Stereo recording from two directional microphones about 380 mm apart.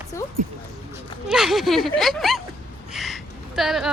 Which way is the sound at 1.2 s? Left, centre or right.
Centre.